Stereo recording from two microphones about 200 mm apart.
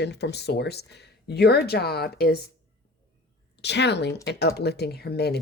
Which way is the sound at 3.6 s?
60° left (ahead or behind).